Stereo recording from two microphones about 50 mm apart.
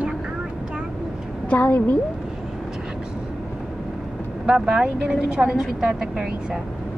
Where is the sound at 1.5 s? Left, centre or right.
Left.